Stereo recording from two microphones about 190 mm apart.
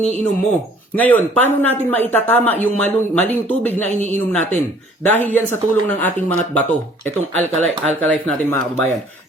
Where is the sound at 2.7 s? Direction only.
5° left (ahead or behind).